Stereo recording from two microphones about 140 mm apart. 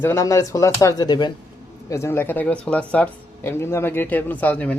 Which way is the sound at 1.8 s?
20° left (ahead or behind).